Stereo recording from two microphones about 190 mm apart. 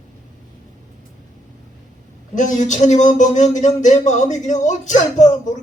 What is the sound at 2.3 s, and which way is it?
Speech, 40° left (ahead or behind).